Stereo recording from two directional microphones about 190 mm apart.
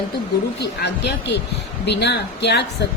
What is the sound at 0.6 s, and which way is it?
A woman's voice, 60° left (ahead or behind).